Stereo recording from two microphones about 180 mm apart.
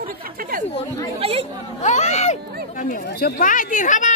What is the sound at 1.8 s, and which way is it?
Speech, 40° left (ahead or behind).